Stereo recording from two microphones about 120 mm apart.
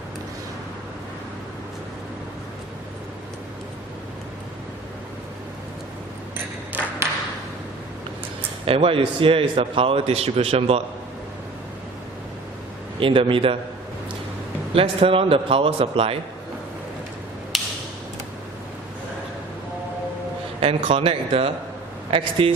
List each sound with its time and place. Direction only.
6.7 s ping: 15° right (ahead or behind)
8.6 s a man's voice: 50° right (ahead or behind)
13.0 s a man's voice: 45° right (ahead or behind)
14.8 s a man's voice: 50° right (ahead or behind)
17.5 s a sound: centre (ahead or behind)
20.6 s a man's voice: 50° right (ahead or behind)